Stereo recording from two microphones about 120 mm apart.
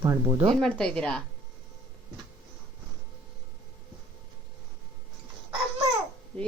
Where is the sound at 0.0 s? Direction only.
25° right (ahead or behind).